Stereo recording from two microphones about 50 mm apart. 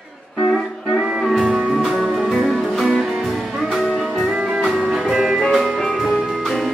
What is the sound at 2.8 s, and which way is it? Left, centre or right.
Music, centre.